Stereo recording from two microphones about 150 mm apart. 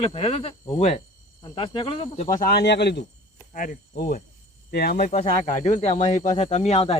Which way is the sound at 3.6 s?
80° left.